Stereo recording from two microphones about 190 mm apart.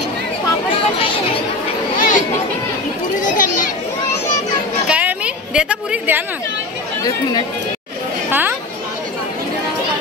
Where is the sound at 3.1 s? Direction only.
45° left (ahead or behind).